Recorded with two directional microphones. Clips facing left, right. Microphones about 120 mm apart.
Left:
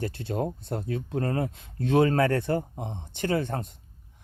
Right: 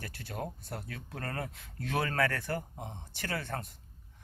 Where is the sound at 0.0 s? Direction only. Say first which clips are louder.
Left 10 dB; 25° left (ahead or behind).